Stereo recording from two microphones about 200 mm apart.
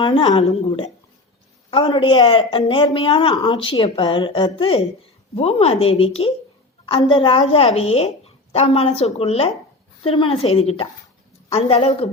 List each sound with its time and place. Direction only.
0.0 s a woman's voice: 20° left (ahead or behind)